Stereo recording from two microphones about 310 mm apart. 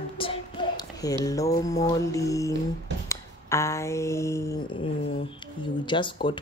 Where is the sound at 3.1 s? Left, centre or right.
Centre.